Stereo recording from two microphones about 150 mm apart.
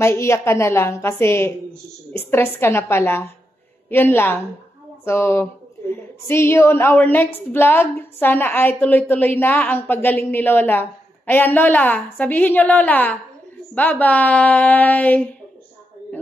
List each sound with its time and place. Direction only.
0.0 s a woman's voice: 20° left (ahead or behind)